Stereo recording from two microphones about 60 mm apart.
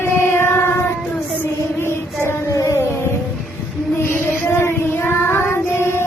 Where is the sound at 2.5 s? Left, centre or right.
Left.